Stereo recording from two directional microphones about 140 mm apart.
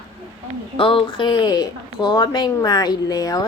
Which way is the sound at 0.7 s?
40° left (ahead or behind).